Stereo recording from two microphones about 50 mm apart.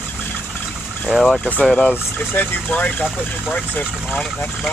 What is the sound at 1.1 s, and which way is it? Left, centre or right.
Speech, centre.